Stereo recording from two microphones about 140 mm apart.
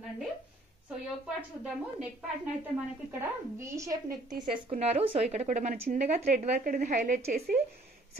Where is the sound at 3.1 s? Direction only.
20° right (ahead or behind).